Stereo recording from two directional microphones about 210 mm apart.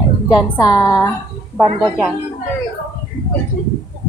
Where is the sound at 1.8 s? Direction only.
Centre (ahead or behind).